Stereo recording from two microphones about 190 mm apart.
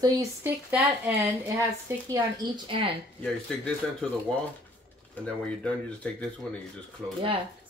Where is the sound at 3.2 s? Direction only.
5° left (ahead or behind).